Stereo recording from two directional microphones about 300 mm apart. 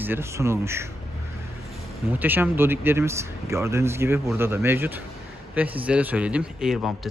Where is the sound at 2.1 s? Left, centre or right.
Centre.